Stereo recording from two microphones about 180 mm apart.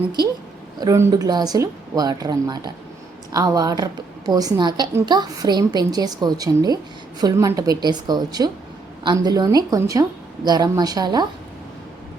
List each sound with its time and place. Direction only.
0.8 s a woman's voice: 20° right (ahead or behind)